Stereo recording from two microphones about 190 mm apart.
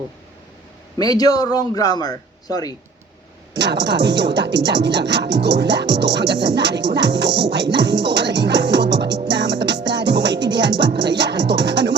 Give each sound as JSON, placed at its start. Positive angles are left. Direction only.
{"t": 0.9, "sound": "a man's voice", "side_deg": 20}
{"t": 3.5, "sound": "speech", "side_deg": -65}